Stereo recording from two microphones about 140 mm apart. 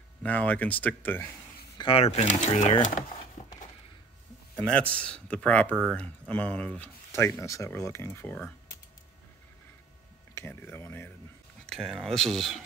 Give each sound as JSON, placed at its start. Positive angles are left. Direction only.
{"t": 0.2, "sound": "speech", "side_deg": 10}
{"t": 1.8, "sound": "speech", "side_deg": 40}
{"t": 3.4, "sound": "a sound", "side_deg": 50}
{"t": 4.6, "sound": "a man's voice", "side_deg": 5}
{"t": 7.1, "sound": "speech", "side_deg": 20}
{"t": 10.3, "sound": "speech", "side_deg": 15}
{"t": 11.7, "sound": "speech", "side_deg": 0}